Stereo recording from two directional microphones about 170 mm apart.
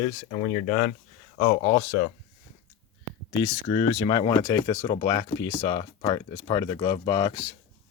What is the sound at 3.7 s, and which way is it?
Speech, 25° left (ahead or behind).